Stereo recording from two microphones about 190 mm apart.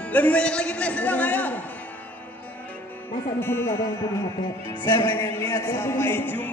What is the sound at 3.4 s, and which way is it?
Speech, 10° left (ahead or behind).